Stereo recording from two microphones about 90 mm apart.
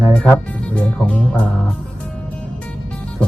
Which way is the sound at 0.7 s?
15° left (ahead or behind).